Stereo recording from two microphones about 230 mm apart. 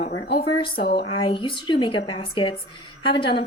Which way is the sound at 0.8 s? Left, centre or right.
Left.